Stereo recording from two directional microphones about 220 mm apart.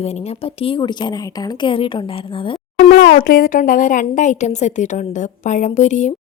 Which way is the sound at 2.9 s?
40° left (ahead or behind).